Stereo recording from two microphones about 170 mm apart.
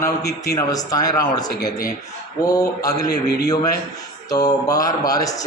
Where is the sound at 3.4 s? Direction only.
20° left (ahead or behind).